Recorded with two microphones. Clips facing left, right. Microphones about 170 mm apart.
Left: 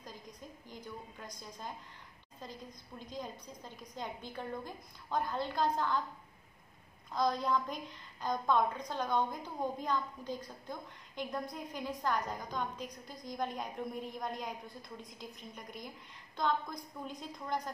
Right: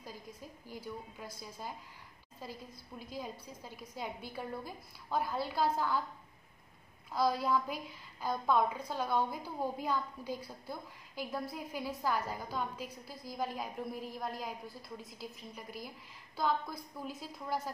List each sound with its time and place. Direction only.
0.0 s a woman's voice: 10° right (ahead or behind)
7.1 s a woman's voice: 5° right (ahead or behind)